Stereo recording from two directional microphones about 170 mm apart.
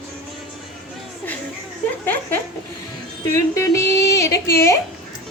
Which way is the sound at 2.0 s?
10° left (ahead or behind).